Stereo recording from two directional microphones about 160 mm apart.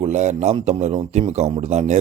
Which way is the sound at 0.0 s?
45° right (ahead or behind).